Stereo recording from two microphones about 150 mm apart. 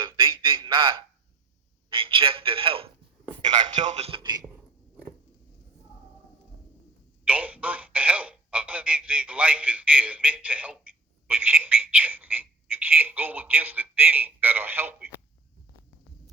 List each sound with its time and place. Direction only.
0.2 s a sound: 30° right (ahead or behind)
1.9 s a man's voice: 35° right (ahead or behind)
3.8 s music: 45° right (ahead or behind)
4.2 s speech: 25° right (ahead or behind)
7.3 s speech: 10° right (ahead or behind)